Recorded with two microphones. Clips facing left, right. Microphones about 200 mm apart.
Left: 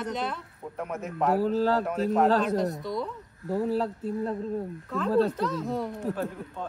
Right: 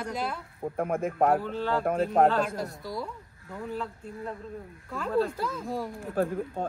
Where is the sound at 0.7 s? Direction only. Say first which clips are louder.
Right 4 dB; 50° right (ahead or behind).